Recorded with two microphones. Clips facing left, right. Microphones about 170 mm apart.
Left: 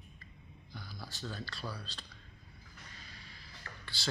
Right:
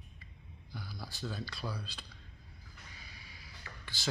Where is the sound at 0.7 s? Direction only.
10° right (ahead or behind).